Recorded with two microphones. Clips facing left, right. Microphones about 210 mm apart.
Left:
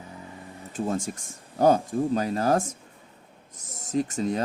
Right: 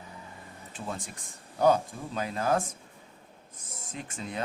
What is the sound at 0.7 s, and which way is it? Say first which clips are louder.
Speech: left 10 dB; 45° left (ahead or behind).